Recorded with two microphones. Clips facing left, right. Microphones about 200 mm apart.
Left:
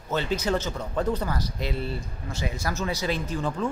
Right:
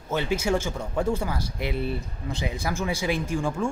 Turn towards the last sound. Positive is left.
turn(degrees=-10)  # may be behind; listen again after turning